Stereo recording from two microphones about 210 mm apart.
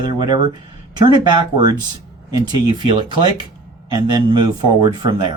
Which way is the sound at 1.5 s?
20° right (ahead or behind).